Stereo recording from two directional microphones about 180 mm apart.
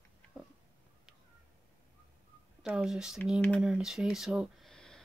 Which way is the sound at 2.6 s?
5° right (ahead or behind).